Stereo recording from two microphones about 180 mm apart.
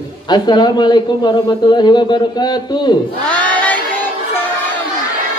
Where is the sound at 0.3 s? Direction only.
25° left (ahead or behind).